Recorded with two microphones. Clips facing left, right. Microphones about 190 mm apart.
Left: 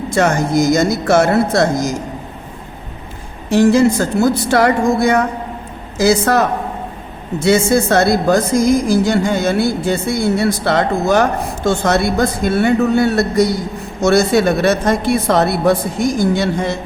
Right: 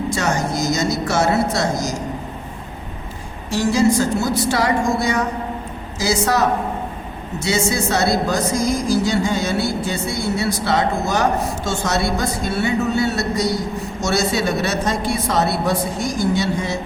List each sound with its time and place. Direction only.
0.1 s speech: 55° left (ahead or behind)
3.5 s speech: 55° left (ahead or behind)
7.4 s speech: 55° left (ahead or behind)